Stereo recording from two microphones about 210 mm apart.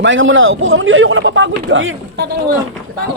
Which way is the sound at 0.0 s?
65° right (ahead or behind).